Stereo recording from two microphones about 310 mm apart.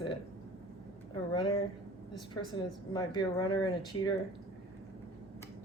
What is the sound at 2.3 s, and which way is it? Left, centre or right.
Speech, centre.